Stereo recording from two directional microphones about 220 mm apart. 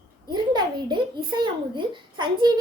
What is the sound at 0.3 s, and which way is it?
A child's voice, 20° right (ahead or behind).